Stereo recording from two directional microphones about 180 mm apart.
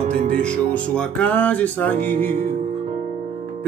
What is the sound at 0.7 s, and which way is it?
Music, 5° left (ahead or behind).